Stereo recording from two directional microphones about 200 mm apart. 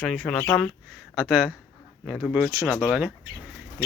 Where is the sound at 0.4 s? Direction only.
10° left (ahead or behind).